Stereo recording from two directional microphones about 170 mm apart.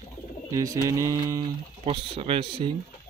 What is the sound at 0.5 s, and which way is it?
Mantra, 20° right (ahead or behind).